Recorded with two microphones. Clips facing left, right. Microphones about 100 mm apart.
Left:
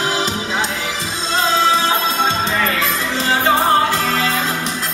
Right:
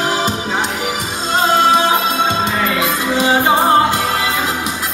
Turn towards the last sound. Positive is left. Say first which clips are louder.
# right 3 dB
turn(degrees=-15)  # may be behind; listen again after turning